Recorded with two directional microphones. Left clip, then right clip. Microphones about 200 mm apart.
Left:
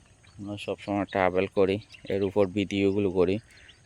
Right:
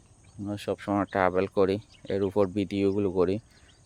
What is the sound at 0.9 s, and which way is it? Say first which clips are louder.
Speech: even; 10° right (ahead or behind).